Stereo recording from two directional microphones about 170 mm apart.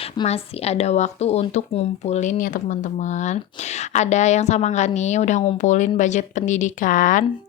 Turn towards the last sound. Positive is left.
turn(degrees=50)  # may be behind; listen again after turning